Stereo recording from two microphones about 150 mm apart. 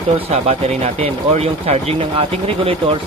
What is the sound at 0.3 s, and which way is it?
Speech, 45° right (ahead or behind).